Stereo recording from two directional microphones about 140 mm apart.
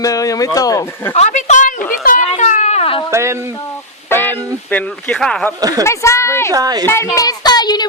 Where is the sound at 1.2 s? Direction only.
55° left (ahead or behind).